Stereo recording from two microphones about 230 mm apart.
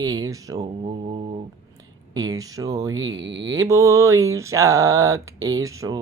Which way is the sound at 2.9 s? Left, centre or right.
Right.